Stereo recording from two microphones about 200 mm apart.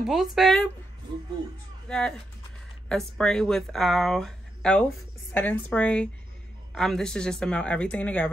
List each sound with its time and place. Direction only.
0.0 s speech: centre (ahead or behind)
1.9 s speech: 5° left (ahead or behind)